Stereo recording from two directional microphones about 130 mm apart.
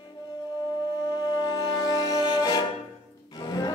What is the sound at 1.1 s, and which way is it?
Music, 35° left (ahead or behind).